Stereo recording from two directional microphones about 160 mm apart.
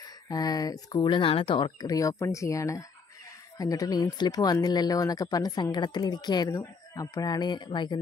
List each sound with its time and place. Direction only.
0.3 s speech: 25° left (ahead or behind)